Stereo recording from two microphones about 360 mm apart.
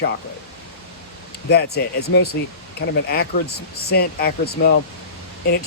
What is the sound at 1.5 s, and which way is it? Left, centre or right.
Speech, left.